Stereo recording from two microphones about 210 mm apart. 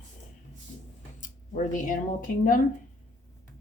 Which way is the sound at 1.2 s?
40° left (ahead or behind).